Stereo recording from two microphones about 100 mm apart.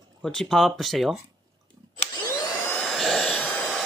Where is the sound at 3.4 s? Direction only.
10° left (ahead or behind).